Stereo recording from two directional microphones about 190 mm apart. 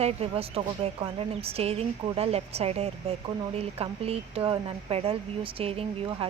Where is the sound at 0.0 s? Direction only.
35° right (ahead or behind).